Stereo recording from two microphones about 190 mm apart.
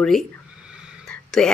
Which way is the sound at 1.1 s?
5° left (ahead or behind).